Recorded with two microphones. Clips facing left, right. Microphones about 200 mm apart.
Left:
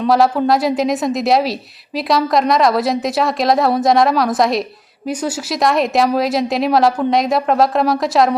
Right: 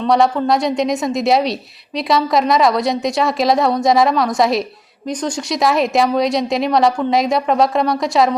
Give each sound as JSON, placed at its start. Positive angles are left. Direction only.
{"t": 0.0, "sound": "a woman's voice", "side_deg": 5}